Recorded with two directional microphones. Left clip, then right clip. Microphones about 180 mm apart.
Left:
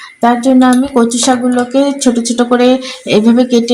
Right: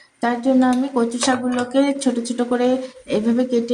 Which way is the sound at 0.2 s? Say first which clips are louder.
Left 9 dB; 55° left (ahead or behind).